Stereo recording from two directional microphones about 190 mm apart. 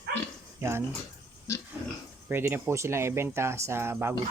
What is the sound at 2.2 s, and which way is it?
Speech, 10° right (ahead or behind).